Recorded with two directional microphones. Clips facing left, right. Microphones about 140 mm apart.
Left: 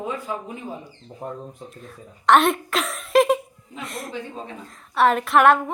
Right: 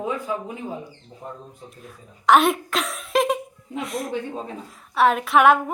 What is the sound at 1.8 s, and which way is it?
A woman's voice, 5° right (ahead or behind).